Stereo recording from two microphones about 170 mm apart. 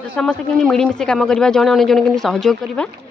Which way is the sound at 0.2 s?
5° left (ahead or behind).